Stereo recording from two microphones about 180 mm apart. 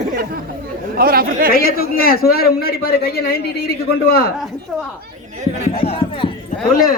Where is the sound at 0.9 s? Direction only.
55° right (ahead or behind).